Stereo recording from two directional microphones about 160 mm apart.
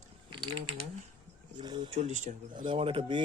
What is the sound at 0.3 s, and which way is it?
Typing, 30° right (ahead or behind).